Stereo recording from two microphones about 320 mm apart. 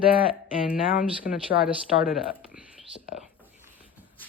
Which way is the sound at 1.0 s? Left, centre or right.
Centre.